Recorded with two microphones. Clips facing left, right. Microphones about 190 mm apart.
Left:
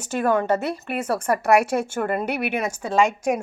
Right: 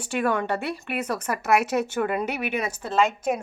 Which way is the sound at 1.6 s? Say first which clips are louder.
Left 1 dB; 10° left (ahead or behind).